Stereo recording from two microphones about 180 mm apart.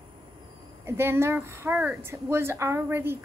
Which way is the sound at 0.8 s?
15° right (ahead or behind).